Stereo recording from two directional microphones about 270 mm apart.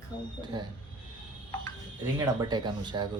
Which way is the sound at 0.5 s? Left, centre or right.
Centre.